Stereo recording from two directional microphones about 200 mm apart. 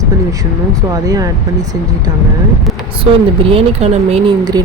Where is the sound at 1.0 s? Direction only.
20° right (ahead or behind).